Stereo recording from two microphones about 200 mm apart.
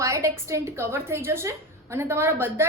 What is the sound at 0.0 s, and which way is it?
A woman's voice, 15° right (ahead or behind).